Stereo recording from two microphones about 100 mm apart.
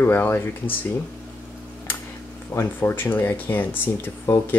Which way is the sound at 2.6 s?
20° left (ahead or behind).